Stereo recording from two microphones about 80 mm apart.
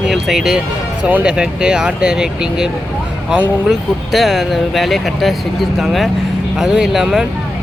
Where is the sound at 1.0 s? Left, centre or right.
Centre.